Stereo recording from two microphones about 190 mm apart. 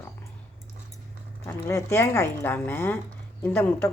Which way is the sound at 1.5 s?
15° left (ahead or behind).